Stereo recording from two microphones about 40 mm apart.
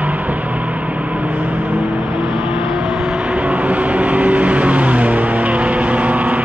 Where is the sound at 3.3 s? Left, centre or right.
Right.